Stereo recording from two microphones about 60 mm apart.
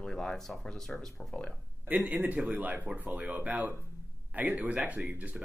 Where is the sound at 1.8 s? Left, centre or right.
Centre.